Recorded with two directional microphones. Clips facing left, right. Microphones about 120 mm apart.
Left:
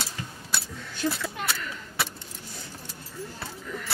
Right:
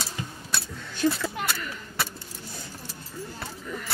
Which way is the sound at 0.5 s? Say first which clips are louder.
Even; 5° left (ahead or behind).